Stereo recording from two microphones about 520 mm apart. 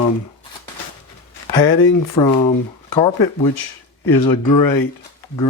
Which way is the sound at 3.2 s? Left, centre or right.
Left.